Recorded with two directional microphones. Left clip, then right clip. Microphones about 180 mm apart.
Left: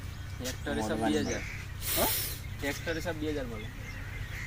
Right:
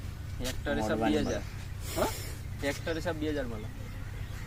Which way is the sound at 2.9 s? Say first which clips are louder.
Right 1 dB; 15° right (ahead or behind).